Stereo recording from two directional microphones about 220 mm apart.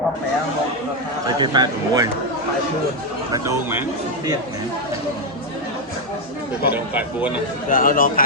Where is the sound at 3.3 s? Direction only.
10° right (ahead or behind).